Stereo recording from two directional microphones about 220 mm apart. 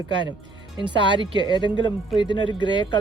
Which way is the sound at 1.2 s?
20° right (ahead or behind).